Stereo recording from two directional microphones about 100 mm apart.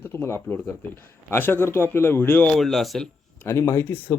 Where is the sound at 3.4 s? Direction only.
30° left (ahead or behind).